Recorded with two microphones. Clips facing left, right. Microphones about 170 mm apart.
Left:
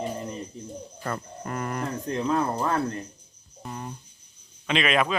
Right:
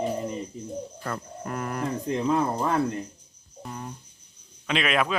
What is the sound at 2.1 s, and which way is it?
Speech, 15° right (ahead or behind).